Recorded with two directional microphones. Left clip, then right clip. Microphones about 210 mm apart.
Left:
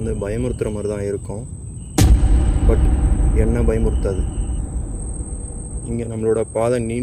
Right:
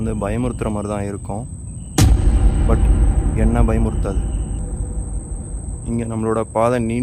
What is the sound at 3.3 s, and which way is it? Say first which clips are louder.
Speech: left 1 dB; 10° right (ahead or behind).